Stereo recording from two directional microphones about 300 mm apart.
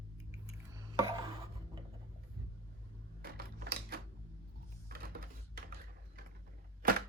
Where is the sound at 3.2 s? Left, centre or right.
Right.